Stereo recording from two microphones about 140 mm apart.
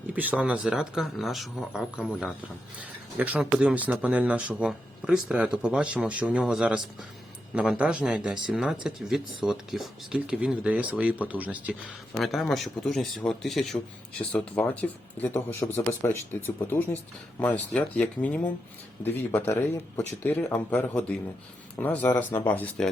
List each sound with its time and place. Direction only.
0.1 s speech: 10° right (ahead or behind)
12.1 s speech: centre (ahead or behind)